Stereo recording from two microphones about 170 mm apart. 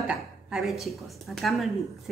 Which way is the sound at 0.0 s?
5° right (ahead or behind).